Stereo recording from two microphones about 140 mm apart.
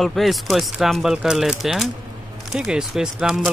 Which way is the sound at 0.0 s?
Centre (ahead or behind).